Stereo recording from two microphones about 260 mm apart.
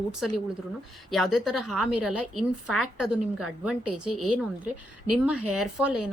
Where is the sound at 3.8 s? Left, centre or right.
Right.